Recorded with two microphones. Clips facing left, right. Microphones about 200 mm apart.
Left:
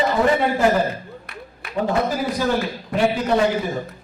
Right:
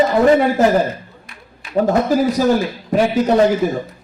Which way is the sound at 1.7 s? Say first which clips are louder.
Right 6 dB; 40° right (ahead or behind).